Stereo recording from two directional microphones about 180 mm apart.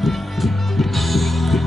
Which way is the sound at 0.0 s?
Centre (ahead or behind).